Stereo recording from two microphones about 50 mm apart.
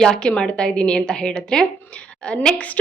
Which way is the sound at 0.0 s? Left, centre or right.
Centre.